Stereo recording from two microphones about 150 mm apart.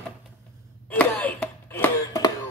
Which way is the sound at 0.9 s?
10° left (ahead or behind).